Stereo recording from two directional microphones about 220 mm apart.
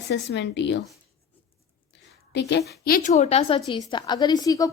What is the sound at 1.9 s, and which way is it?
A woman's voice, 50° left (ahead or behind).